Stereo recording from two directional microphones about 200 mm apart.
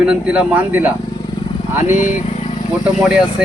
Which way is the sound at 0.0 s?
5° right (ahead or behind).